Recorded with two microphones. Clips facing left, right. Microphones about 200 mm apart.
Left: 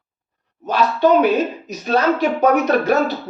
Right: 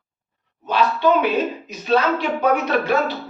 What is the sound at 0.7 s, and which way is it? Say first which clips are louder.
A man's voice: left 3 dB; 45° left (ahead or behind).